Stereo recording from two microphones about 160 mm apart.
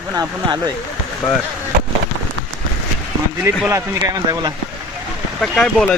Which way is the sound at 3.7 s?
20° right (ahead or behind).